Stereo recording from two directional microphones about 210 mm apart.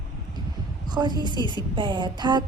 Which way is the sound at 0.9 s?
20° right (ahead or behind).